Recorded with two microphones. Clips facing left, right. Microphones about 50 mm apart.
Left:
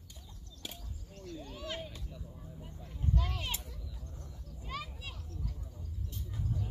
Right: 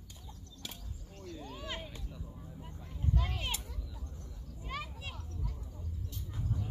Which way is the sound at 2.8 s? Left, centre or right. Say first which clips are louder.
Even; centre.